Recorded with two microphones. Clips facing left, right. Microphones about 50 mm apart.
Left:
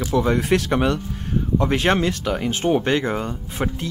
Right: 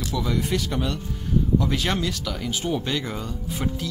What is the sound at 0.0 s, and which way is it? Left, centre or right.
Speech, left.